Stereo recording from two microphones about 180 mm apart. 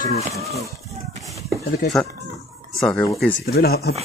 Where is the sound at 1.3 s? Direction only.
20° right (ahead or behind).